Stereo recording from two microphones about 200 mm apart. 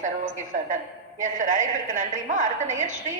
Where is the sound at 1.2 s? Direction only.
40° right (ahead or behind).